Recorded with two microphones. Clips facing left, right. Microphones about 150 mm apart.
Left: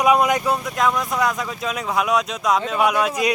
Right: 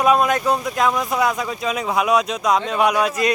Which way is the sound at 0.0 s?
15° left (ahead or behind).